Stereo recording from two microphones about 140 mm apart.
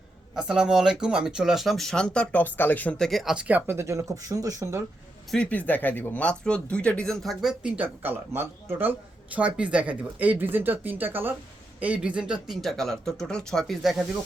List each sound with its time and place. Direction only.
0.3 s speech: 5° right (ahead or behind); by 3.1 s 10° left (ahead or behind)
3.1 s speech: centre (ahead or behind); by 4.8 s 20° right (ahead or behind)
5.3 s speech: 10° left (ahead or behind)